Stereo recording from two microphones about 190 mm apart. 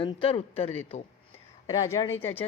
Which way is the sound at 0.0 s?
25° left (ahead or behind).